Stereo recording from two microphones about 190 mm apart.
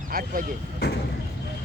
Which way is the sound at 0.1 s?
50° right (ahead or behind).